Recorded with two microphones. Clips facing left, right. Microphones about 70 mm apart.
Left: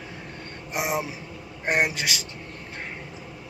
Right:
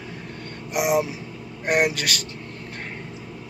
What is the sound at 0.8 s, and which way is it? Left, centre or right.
Speech, left.